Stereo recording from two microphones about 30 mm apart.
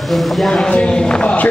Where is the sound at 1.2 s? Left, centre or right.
Left.